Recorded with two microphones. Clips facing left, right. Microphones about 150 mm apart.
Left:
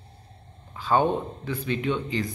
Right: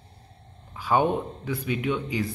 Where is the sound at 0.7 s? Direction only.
10° right (ahead or behind).